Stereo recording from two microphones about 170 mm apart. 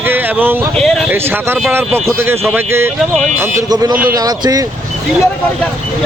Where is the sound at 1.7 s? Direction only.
10° right (ahead or behind).